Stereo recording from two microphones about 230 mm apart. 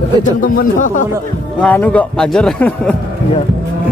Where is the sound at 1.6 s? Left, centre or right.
Centre.